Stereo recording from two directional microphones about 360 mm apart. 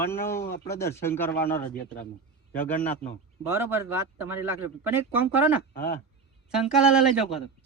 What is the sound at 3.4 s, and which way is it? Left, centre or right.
Speech, centre.